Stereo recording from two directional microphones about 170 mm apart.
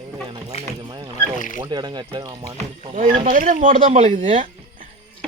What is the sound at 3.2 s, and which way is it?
Speech, 50° right (ahead or behind).